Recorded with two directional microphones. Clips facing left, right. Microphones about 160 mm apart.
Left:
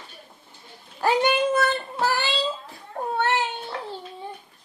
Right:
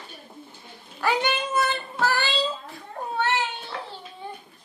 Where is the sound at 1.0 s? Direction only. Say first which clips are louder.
Left 4 dB; 45° left (ahead or behind).